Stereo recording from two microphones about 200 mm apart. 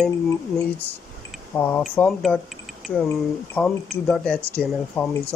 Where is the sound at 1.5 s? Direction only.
10° left (ahead or behind).